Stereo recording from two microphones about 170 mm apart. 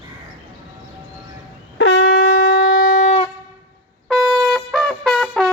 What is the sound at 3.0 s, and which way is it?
Wind instrument, 30° left (ahead or behind).